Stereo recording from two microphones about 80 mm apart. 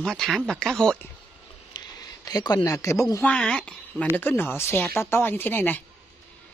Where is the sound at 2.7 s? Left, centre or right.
Left.